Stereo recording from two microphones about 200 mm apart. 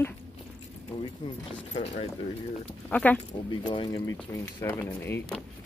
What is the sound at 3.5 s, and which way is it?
Speech, 25° left (ahead or behind).